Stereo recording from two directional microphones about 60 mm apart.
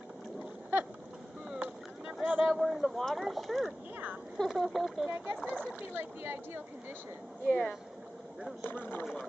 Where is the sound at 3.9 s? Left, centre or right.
Right.